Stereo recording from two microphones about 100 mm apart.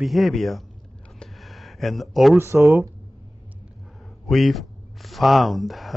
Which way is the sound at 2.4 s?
25° right (ahead or behind).